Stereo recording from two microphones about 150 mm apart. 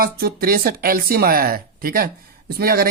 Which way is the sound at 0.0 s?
80° right.